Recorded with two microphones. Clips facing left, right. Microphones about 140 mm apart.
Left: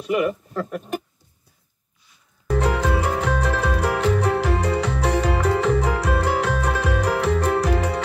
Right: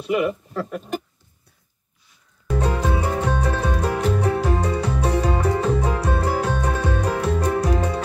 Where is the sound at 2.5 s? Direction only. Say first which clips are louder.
Left 2 dB; 85° left.